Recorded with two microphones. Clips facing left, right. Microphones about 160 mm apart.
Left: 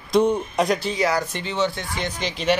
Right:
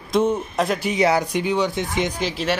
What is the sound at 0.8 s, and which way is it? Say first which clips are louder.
Speech: right 3 dB; 20° right (ahead or behind).